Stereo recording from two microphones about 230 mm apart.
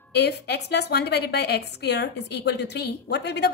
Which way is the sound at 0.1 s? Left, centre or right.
Left.